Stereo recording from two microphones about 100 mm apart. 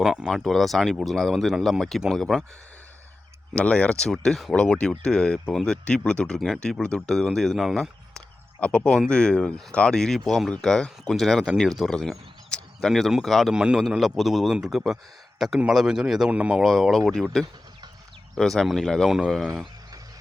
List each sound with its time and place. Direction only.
0.0 s speech: 5° right (ahead or behind)
3.5 s speech: 10° left (ahead or behind); by 16.6 s 10° right (ahead or behind)
16.6 s speech: centre (ahead or behind)